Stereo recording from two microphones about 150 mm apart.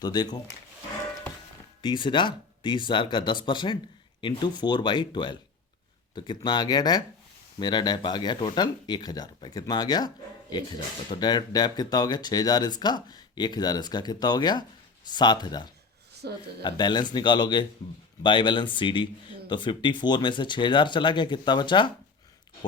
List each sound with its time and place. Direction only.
0.0 s speech: 25° left (ahead or behind)
1.8 s speech: 30° left (ahead or behind)
16.1 s speech: 90° right
16.6 s speech: 30° left (ahead or behind)